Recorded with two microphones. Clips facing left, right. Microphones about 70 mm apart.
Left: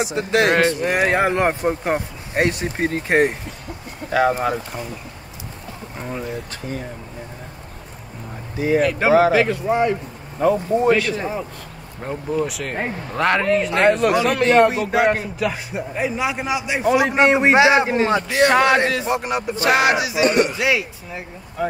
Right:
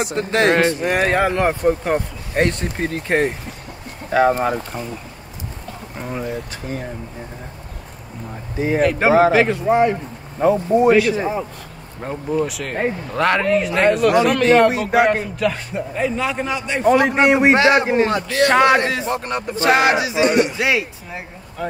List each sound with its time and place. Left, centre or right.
0.0 s speech: right
0.8 s speech: centre
4.1 s speech: right
5.9 s speech: centre
8.5 s speech: right
10.4 s speech: centre
12.0 s speech: centre
14.2 s speech: centre
14.7 s a sound: right
15.0 s speech: centre
19.5 s a sound: right
20.5 s speech: right
21.6 s speech: centre